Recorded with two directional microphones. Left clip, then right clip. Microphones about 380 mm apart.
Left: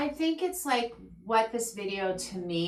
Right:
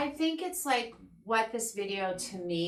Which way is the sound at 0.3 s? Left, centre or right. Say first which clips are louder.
Left 2 dB; centre.